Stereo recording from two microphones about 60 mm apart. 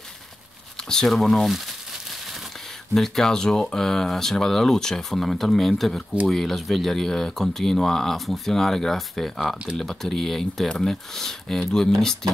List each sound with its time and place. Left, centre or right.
0.7 s speech: centre
2.9 s speech: centre